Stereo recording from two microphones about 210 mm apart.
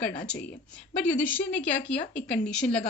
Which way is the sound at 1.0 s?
5° left (ahead or behind).